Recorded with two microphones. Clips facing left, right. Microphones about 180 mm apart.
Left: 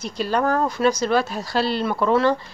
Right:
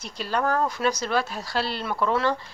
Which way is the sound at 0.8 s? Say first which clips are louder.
Left 9 dB; 35° left (ahead or behind).